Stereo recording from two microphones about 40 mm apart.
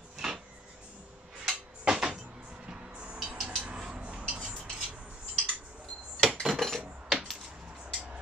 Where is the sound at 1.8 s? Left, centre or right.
Right.